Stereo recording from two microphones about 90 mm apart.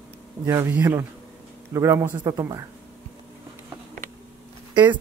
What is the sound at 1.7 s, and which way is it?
Speech, 30° right (ahead or behind).